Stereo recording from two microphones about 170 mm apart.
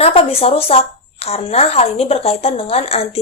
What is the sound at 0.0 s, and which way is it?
A woman's voice, 35° left (ahead or behind).